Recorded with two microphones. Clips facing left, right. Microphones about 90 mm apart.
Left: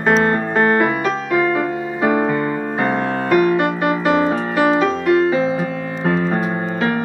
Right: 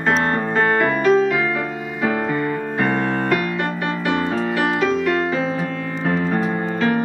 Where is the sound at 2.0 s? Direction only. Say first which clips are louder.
Left 3 dB; 25° left (ahead or behind).